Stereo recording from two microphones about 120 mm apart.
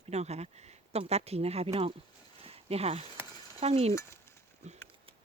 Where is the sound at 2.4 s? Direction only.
55° right (ahead or behind).